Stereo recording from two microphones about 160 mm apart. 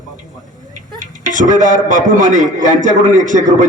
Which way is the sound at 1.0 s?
50° right (ahead or behind).